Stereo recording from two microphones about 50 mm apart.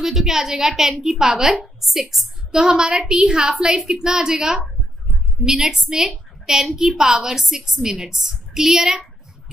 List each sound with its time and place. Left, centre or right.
0.0 s a woman's voice: centre